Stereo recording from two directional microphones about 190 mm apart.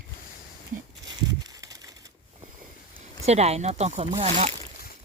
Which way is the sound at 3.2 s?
35° right (ahead or behind).